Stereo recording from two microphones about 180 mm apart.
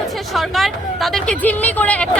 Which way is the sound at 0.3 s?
Centre (ahead or behind).